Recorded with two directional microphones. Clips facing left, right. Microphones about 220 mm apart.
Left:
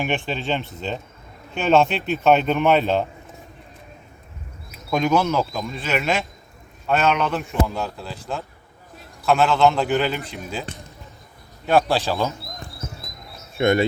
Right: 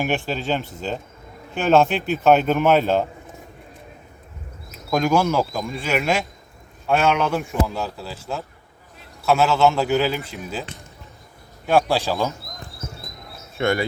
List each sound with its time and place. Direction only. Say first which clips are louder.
0.0 s speech: right 1 dB; 5° right (ahead or behind)
4.9 s speech: right 1 dB; 5° right (ahead or behind)
13.6 s speech: left 3 dB; 20° left (ahead or behind)